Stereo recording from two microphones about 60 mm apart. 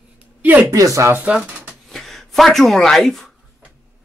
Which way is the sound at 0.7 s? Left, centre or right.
Right.